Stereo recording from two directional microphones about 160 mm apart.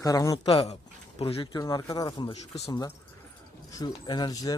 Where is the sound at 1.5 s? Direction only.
25° left (ahead or behind).